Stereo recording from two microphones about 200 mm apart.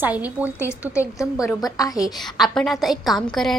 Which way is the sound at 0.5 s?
15° left (ahead or behind).